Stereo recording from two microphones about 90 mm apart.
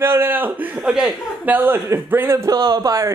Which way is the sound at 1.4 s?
20° right (ahead or behind).